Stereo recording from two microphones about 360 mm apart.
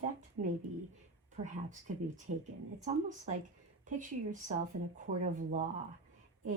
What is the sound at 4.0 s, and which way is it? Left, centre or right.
Speech, right.